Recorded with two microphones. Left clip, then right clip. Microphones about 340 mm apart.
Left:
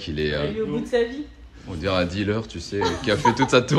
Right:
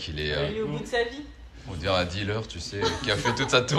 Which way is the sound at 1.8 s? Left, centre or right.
Centre.